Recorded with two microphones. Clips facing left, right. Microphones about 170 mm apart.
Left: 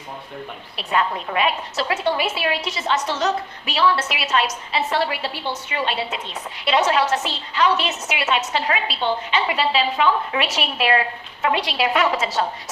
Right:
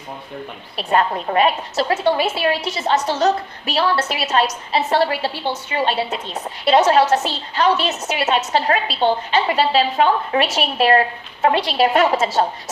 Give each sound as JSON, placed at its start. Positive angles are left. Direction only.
{"t": 0.8, "sound": "a woman's voice", "side_deg": -45}
{"t": 2.0, "sound": "a woman's voice", "side_deg": -30}